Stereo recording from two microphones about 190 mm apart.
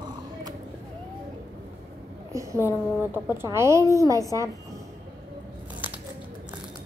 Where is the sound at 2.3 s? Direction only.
15° right (ahead or behind).